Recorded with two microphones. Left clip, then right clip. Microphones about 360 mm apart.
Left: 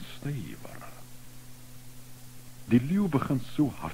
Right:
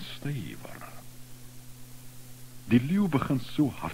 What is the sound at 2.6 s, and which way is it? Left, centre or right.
Speech, right.